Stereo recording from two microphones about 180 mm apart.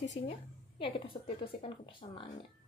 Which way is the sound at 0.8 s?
30° left (ahead or behind).